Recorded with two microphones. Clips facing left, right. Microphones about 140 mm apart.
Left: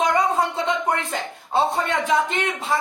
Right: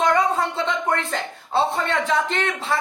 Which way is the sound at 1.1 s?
15° left (ahead or behind).